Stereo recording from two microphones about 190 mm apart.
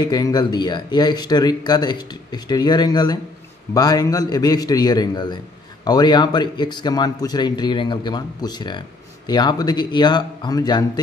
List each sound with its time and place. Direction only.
0.0 s speech: 20° left (ahead or behind)